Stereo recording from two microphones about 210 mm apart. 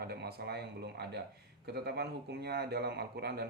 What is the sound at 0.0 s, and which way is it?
Speech, 50° right (ahead or behind).